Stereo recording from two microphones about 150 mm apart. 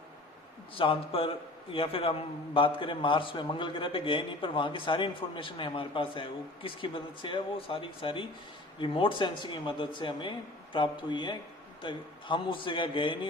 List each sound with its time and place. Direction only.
0.8 s a man's voice: 35° left (ahead or behind)